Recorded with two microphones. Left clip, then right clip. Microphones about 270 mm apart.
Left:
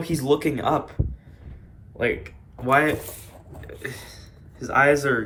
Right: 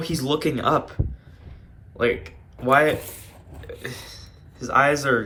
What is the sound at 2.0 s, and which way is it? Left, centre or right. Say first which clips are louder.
Speech: right 2 dB; centre.